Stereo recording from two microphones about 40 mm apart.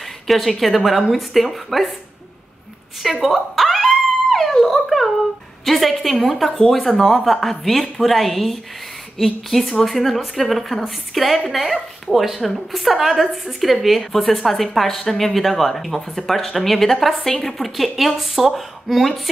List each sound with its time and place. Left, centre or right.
0.3 s a woman's voice: centre
3.0 s dog: centre
5.7 s a woman's voice: centre